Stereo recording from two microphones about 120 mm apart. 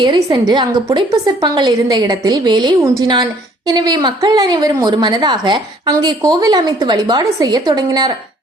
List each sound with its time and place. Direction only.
0.0 s a woman's voice: 35° right (ahead or behind)